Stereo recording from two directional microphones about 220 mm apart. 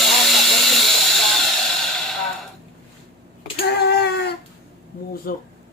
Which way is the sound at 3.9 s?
50° left (ahead or behind).